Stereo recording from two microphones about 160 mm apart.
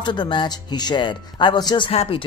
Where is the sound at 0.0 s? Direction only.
30° left (ahead or behind).